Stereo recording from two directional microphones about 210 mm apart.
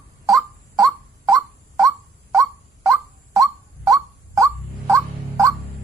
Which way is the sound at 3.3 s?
15° right (ahead or behind).